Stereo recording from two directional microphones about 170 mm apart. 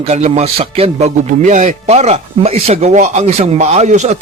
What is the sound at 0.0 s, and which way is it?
A man's voice, 40° right (ahead or behind).